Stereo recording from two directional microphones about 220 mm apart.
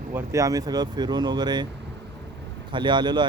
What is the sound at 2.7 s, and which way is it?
Speech, 20° right (ahead or behind).